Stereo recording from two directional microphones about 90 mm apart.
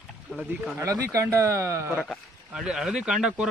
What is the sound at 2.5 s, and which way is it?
Speech, 5° right (ahead or behind).